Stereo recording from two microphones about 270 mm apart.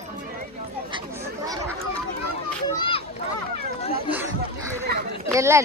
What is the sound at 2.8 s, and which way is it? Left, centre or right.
Children playing, centre.